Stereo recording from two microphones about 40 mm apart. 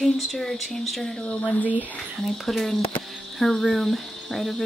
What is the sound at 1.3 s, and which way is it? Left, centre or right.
Speech, left.